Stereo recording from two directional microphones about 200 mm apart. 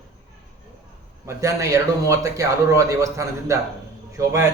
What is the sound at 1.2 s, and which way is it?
Speech, 15° right (ahead or behind).